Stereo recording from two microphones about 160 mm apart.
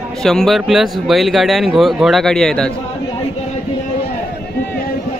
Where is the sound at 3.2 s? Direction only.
45° left (ahead or behind).